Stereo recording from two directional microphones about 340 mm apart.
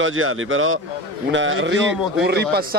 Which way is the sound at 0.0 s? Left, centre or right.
Right.